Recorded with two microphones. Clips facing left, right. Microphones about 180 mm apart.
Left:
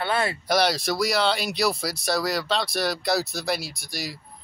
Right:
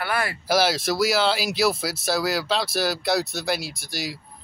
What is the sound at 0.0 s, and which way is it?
Speech, 25° left (ahead or behind).